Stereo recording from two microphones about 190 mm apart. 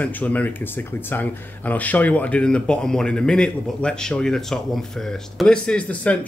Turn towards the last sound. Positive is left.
turn(degrees=5)  # may be behind; listen again after turning